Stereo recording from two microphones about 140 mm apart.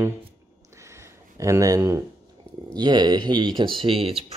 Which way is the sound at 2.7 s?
30° right (ahead or behind).